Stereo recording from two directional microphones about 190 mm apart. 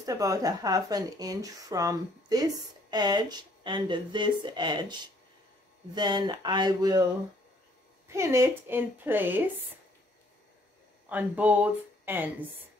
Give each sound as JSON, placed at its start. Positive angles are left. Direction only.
{"t": 0.0, "sound": "speech", "side_deg": -20}
{"t": 8.1, "sound": "a woman's voice", "side_deg": -15}
{"t": 11.1, "sound": "a woman's voice", "side_deg": -10}